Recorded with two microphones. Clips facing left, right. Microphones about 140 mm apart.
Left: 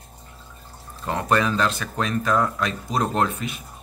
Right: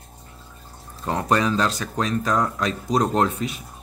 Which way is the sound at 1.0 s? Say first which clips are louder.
Right 1 dB; 20° right (ahead or behind).